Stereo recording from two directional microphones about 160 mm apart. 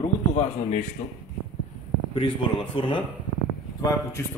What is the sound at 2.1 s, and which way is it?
Speech, 30° left (ahead or behind).